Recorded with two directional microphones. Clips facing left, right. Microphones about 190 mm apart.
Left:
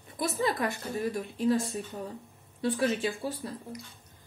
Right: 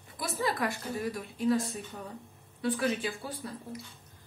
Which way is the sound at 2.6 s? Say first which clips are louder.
Left 2 dB; 25° left (ahead or behind).